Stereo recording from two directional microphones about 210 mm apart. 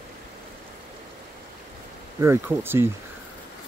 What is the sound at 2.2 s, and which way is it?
Speech, 10° right (ahead or behind).